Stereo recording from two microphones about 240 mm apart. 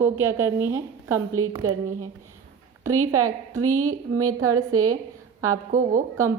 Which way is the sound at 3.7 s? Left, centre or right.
Right.